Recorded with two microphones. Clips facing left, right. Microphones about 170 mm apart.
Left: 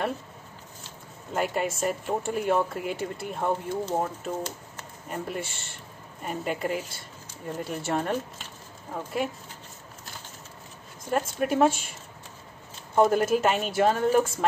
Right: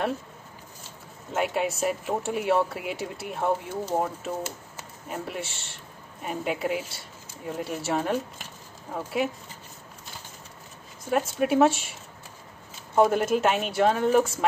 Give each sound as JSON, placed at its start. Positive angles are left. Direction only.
{"t": 1.3, "sound": "speech", "side_deg": 0}
{"t": 11.1, "sound": "speech", "side_deg": -5}